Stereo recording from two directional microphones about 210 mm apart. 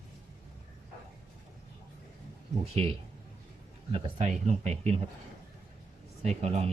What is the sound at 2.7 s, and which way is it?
Speech, 25° right (ahead or behind).